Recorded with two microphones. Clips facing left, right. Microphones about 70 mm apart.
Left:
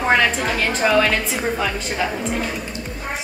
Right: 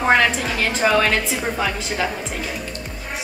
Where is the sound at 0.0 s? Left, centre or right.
Centre.